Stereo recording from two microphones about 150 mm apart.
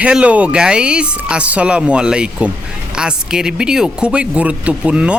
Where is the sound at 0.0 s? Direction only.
5° right (ahead or behind).